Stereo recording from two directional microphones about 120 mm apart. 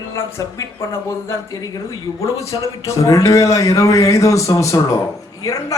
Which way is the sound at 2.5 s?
25° left (ahead or behind).